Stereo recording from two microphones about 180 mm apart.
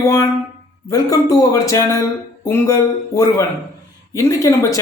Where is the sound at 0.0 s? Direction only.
20° left (ahead or behind).